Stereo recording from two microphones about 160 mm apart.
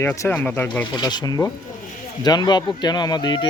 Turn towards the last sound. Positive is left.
turn(degrees=30)  # may be behind; listen again after turning